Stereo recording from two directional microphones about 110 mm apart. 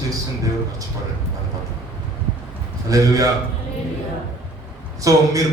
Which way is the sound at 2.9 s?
30° right (ahead or behind).